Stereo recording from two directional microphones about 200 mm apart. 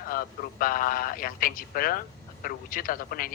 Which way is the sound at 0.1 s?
45° left (ahead or behind).